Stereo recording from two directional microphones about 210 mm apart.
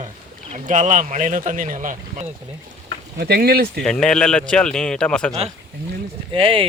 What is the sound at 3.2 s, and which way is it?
Speech, 50° right (ahead or behind).